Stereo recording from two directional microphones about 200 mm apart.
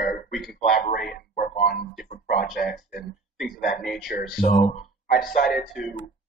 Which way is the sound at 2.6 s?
50° left (ahead or behind).